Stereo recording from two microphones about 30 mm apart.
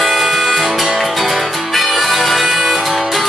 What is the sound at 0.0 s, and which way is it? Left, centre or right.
Music, centre.